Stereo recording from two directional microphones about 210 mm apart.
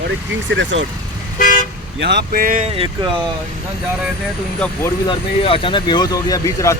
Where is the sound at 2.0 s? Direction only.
55° right (ahead or behind).